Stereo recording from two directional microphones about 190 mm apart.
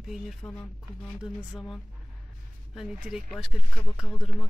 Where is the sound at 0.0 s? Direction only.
Centre (ahead or behind).